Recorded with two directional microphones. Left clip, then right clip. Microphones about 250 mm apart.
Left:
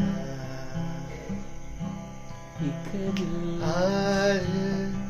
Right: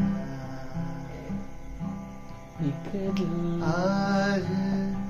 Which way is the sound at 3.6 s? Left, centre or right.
Left.